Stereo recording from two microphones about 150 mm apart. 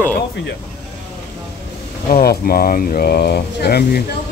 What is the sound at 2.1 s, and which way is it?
Speech, 85° left.